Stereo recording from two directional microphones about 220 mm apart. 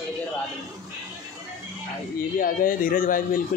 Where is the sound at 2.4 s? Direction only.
40° left (ahead or behind).